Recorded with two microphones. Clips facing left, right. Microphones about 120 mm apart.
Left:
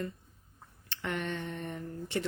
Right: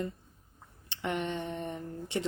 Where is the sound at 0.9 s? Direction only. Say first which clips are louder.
Right 2 dB; 20° right (ahead or behind).